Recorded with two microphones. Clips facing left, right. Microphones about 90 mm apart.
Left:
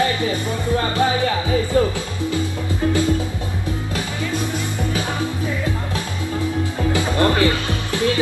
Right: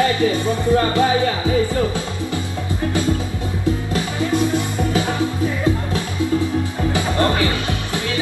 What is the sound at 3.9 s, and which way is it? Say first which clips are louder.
Music: right 4 dB; 20° right (ahead or behind).